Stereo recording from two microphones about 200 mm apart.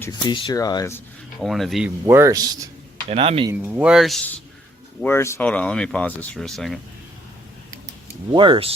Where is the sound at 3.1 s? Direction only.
30° right (ahead or behind).